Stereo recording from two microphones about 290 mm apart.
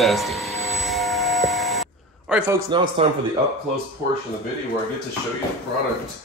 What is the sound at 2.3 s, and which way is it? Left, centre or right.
Speech, centre.